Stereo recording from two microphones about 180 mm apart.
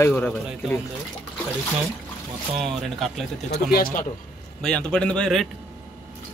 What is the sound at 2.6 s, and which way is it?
Speech, centre (ahead or behind).